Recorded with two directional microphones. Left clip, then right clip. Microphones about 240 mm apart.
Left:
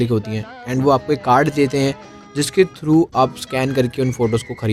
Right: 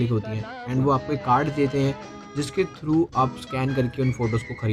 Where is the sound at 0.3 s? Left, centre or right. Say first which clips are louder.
Left 5 dB; left.